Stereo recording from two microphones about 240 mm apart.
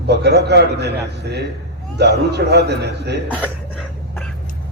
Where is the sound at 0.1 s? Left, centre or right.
Right.